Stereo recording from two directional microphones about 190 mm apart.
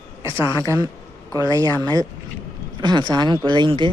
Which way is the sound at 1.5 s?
20° right (ahead or behind).